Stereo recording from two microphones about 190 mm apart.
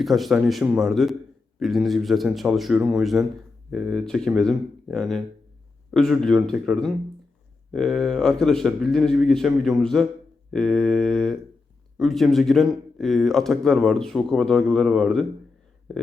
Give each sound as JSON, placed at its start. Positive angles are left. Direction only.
{"t": 0.0, "sound": "speech", "side_deg": 0}